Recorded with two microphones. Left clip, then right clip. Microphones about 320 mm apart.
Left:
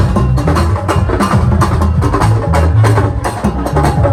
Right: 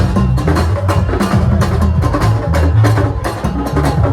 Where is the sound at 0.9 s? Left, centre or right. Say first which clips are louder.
Left 5 dB; centre.